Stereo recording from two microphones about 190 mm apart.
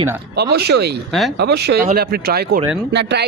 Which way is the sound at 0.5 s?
60° right (ahead or behind).